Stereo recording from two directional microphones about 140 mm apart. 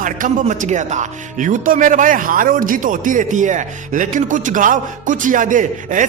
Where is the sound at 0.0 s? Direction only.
70° right (ahead or behind).